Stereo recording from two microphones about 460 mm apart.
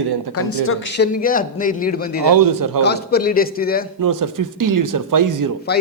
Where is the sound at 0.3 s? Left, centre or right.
Left.